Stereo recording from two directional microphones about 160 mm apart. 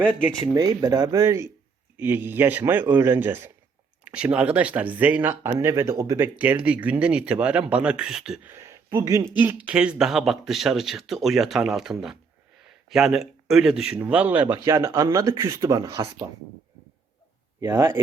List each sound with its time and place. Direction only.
0.4 s speech: 25° right (ahead or behind); by 8.5 s 5° right (ahead or behind)
8.5 s speech: 15° right (ahead or behind)
17.6 s speech: 20° right (ahead or behind)